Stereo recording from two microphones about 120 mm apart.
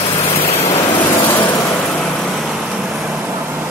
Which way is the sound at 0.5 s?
20° left (ahead or behind).